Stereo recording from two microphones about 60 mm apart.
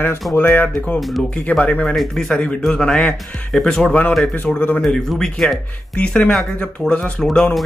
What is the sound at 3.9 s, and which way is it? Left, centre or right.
Speech, left.